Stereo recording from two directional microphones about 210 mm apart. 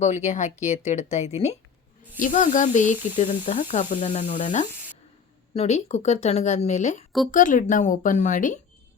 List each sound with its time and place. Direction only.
0.0 s speech: 35° left (ahead or behind)